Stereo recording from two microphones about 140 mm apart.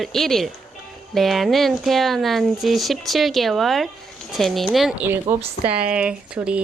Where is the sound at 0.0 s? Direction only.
Centre (ahead or behind).